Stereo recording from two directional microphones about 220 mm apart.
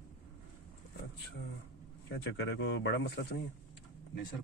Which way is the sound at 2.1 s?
55° left (ahead or behind).